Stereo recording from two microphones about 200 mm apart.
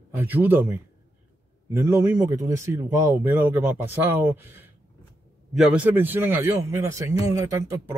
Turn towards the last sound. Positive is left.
turn(degrees=-15)  # may be behind; listen again after turning